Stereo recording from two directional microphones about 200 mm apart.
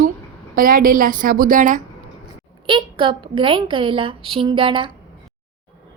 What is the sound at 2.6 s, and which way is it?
A woman's voice, 25° right (ahead or behind).